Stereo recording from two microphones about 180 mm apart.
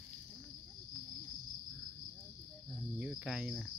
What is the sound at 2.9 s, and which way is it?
Cricket, 5° right (ahead or behind).